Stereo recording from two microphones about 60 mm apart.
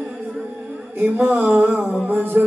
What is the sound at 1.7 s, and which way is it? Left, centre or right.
Music, right.